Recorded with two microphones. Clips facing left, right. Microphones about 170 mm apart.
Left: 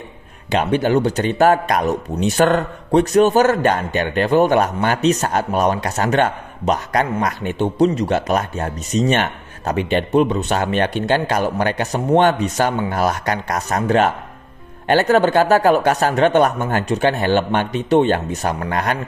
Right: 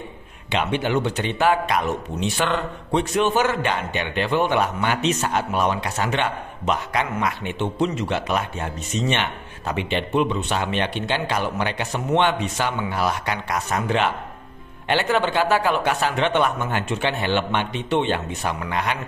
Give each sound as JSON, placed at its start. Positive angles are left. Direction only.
{"t": 0.5, "sound": "a man's voice", "side_deg": 40}